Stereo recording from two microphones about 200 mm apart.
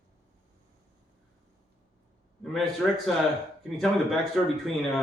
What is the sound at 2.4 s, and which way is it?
Speech, centre (ahead or behind).